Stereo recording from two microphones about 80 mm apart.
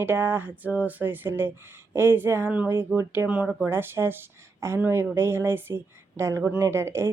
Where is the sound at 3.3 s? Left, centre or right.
Centre.